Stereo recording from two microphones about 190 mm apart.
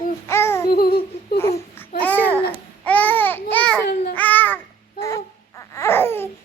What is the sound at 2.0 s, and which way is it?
Babbling, 10° left (ahead or behind).